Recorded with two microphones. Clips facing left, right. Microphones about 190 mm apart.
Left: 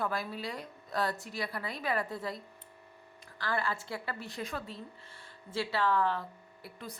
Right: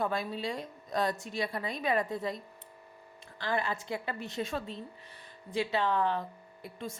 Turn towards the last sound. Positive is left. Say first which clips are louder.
# right 5 dB
turn(degrees=-20)  # may be behind; listen again after turning